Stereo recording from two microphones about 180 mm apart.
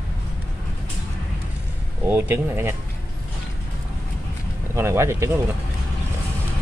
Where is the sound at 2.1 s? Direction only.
15° right (ahead or behind).